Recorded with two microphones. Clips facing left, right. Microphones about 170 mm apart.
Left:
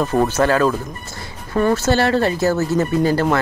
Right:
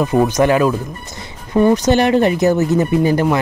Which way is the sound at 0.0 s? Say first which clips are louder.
Right 3 dB; 10° right (ahead or behind).